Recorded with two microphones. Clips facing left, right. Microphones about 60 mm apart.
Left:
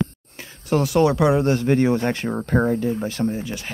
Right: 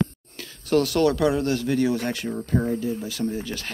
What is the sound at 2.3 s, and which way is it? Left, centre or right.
Speech, left.